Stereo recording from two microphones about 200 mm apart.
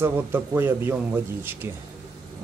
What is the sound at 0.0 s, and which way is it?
Speech, 10° right (ahead or behind).